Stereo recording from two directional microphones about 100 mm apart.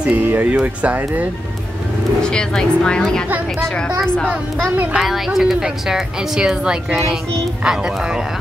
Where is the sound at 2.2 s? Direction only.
10° left (ahead or behind).